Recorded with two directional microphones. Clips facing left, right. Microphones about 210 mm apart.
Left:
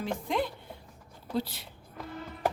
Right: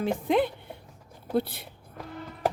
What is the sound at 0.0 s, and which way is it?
A woman's voice, 60° right (ahead or behind).